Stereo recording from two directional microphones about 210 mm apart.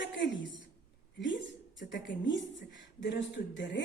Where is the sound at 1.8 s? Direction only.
60° left (ahead or behind).